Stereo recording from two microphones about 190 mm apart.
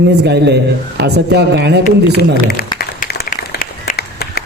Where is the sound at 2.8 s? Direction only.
50° left (ahead or behind).